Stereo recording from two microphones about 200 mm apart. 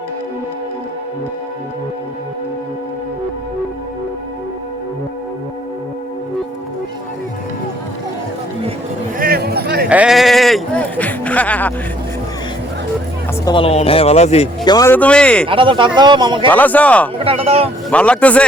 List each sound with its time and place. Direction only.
9.1 s a sound: 45° right (ahead or behind)
9.9 s a sound: 5° right (ahead or behind)
13.4 s speech: 25° left (ahead or behind)
14.6 s speech: 20° left (ahead or behind)
15.4 s speech: 25° right (ahead or behind)
16.5 s speech: 10° left (ahead or behind)
17.2 s speech: 30° right (ahead or behind)
17.9 s speech: 5° left (ahead or behind)